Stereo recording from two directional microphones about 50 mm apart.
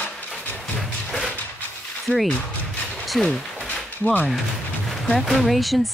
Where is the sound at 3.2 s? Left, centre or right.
Centre.